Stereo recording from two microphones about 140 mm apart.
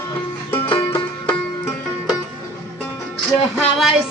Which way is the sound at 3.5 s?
Centre (ahead or behind).